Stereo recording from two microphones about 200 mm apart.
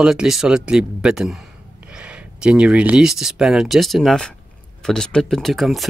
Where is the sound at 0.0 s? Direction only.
Centre (ahead or behind).